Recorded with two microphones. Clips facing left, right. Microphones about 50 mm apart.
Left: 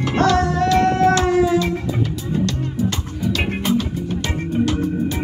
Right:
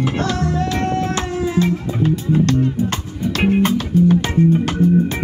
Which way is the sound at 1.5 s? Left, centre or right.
Right.